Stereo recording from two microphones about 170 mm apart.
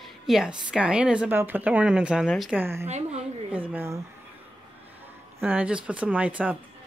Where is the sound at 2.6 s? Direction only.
15° right (ahead or behind).